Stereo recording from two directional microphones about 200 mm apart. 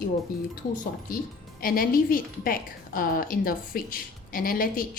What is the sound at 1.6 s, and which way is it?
A woman's voice, 45° left (ahead or behind).